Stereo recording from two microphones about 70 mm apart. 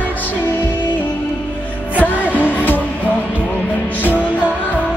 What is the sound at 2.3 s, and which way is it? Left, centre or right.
Music, right.